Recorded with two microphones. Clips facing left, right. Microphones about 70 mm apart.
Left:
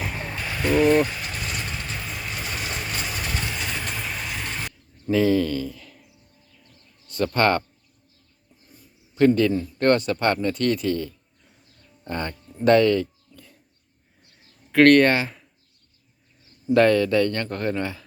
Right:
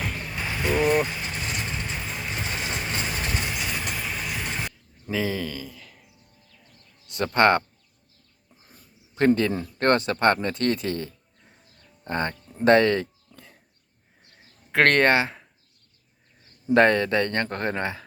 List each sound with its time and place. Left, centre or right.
0.3 s vehicle: centre
4.4 s a sound: centre
7.2 s a man's voice: right
9.1 s speech: right
9.5 s speech: right
9.8 s speech: right
12.5 s a sound: right
14.7 s speech: right
16.7 s speech: right